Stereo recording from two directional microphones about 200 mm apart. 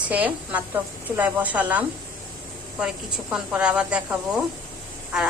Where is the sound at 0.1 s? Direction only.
10° right (ahead or behind).